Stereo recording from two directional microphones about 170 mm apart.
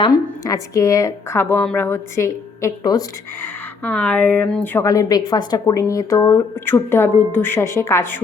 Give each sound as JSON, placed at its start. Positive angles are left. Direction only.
{"t": 0.0, "sound": "a woman's voice", "side_deg": 20}
{"t": 3.4, "sound": "a woman's voice", "side_deg": 10}